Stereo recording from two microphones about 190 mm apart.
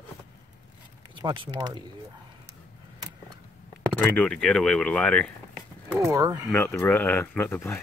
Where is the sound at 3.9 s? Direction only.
5° left (ahead or behind).